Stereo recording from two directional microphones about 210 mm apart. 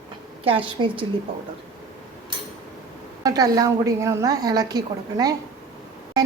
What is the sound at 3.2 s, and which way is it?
A woman's voice, 15° right (ahead or behind).